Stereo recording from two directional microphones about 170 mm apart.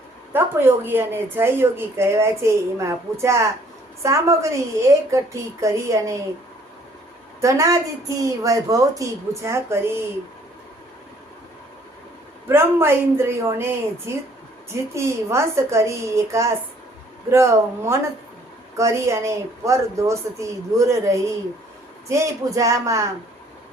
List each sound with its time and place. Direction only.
0.3 s speech: 10° right (ahead or behind)
7.4 s a woman's voice: 20° right (ahead or behind)
12.5 s speech: 15° right (ahead or behind)
22.5 s speech: 20° right (ahead or behind)